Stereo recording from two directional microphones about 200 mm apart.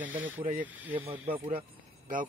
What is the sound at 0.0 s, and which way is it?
Speech, 40° right (ahead or behind).